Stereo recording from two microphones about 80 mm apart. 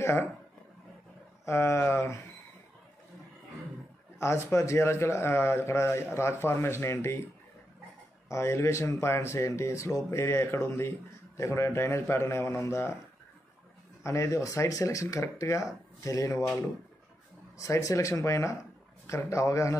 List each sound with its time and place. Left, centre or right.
0.0 s speech: left
1.4 s speech: left
4.2 s speech: left
8.3 s speech: left
14.0 s speech: left
17.6 s speech: left